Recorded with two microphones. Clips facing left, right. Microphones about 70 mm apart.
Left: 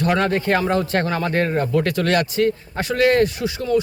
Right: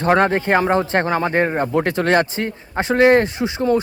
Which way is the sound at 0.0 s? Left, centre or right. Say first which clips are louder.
Right 3 dB; right.